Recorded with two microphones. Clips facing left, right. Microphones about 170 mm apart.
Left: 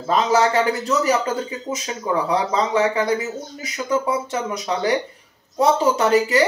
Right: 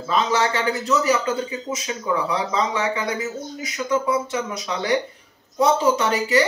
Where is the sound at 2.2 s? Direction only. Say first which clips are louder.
Left 3 dB; 35° left (ahead or behind).